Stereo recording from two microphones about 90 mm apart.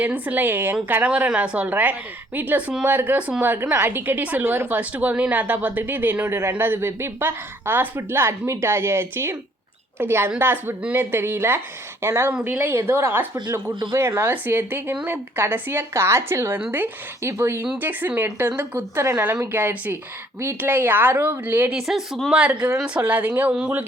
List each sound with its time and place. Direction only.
0.0 s a woman's voice: 15° right (ahead or behind)
21.8 s speech: 5° right (ahead or behind)